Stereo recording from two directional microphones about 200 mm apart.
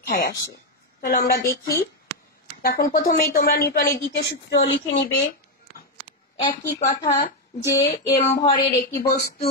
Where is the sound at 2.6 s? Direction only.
50° left (ahead or behind).